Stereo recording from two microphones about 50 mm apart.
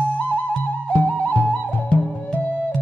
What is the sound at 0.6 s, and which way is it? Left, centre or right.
Music, left.